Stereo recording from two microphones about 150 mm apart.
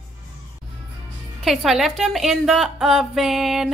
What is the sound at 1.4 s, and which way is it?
A woman's voice, centre (ahead or behind).